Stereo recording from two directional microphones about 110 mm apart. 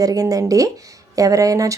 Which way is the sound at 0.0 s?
35° right (ahead or behind).